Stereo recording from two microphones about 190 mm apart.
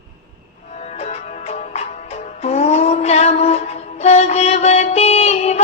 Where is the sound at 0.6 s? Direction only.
35° left (ahead or behind).